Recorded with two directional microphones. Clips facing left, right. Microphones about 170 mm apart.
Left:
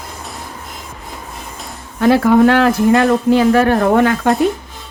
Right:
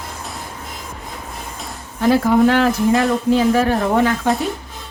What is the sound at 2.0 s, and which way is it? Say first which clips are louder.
Speech: left 3 dB; 70° left (ahead or behind).